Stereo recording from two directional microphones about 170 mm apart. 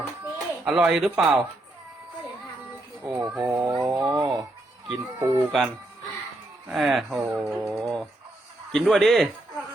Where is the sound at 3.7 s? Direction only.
20° right (ahead or behind).